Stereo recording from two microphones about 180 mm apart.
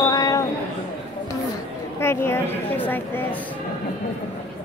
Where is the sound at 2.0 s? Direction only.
15° left (ahead or behind).